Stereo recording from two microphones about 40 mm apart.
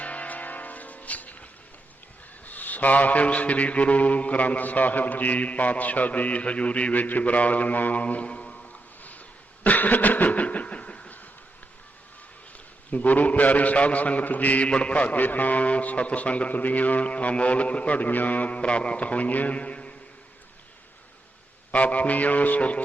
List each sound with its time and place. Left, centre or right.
0.0 s music: left
2.4 s mantra: left
9.6 s cough: left
12.9 s mantra: left
21.7 s mantra: left